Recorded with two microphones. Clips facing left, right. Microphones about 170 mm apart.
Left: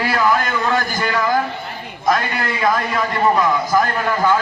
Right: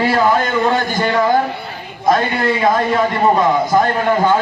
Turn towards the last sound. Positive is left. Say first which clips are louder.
# right 3 dB
turn(degrees=-25)  # may be behind; listen again after turning